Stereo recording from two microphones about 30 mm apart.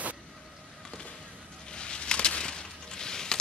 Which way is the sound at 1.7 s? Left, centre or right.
Left.